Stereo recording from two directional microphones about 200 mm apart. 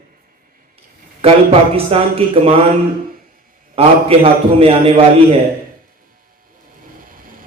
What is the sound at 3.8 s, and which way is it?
A man's voice, 30° right (ahead or behind).